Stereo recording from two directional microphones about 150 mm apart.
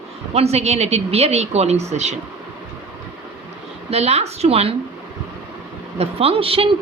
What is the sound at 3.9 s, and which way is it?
Speech, 45° right (ahead or behind).